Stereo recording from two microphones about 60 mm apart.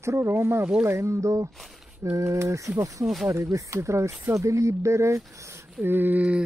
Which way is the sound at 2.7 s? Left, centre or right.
Right.